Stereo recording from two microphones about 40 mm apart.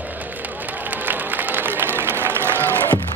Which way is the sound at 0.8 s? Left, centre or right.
Right.